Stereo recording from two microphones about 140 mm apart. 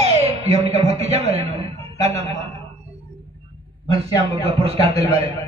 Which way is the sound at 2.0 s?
50° right (ahead or behind).